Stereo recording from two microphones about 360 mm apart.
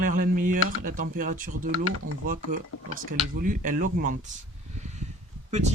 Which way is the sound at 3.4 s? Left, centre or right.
Right.